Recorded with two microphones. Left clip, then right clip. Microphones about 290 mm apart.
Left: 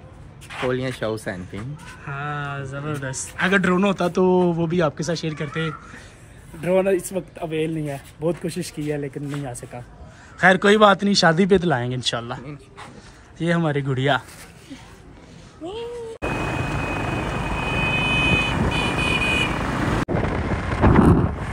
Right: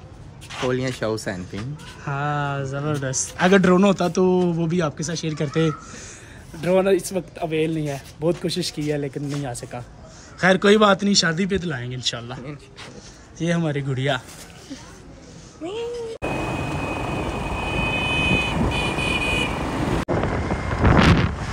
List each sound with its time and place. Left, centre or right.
0.5 s speech: centre
15.6 s vehicle: centre
21.0 s wind noise: centre